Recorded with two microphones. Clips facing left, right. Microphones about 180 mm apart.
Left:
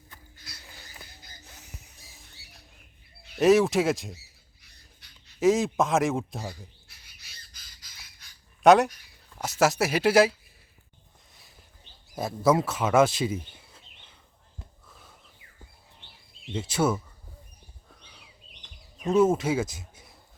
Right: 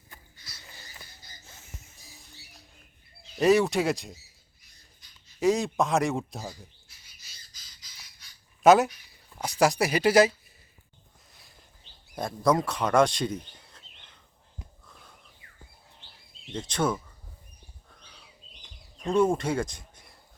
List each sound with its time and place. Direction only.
0.6 s a sound: centre (ahead or behind)
3.3 s speech: centre (ahead or behind)
4.6 s dog: 65° left (ahead or behind)
5.4 s speech: centre (ahead or behind)
6.8 s bird: 60° left (ahead or behind)
8.6 s speech: centre (ahead or behind)
12.1 s speech: 5° left (ahead or behind)
14.8 s a sound: 5° left (ahead or behind)
16.5 s speech: 5° left (ahead or behind)
18.0 s bird: 10° left (ahead or behind)
18.9 s speech: 5° left (ahead or behind)